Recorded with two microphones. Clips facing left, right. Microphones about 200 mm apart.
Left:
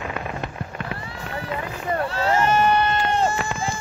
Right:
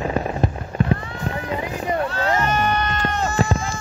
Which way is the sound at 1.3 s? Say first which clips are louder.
Right 5 dB; 35° right (ahead or behind).